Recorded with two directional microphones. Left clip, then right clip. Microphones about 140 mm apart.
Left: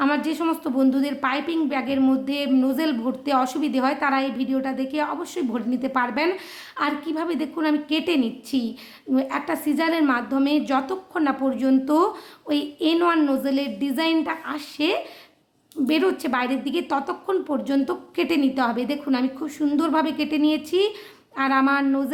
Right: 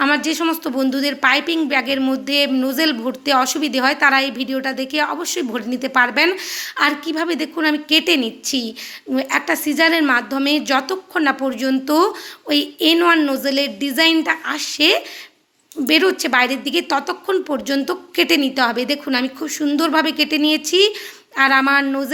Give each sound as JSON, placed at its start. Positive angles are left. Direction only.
{"t": 0.0, "sound": "a woman's voice", "side_deg": -15}